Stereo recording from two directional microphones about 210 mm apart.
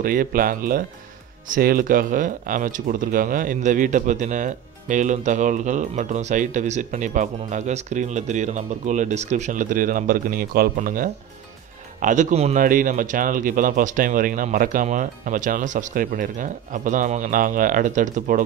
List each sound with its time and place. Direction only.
0.0 s speech: 40° right (ahead or behind)